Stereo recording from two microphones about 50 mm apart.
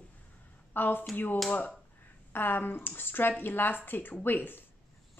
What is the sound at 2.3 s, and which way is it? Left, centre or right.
Speech, left.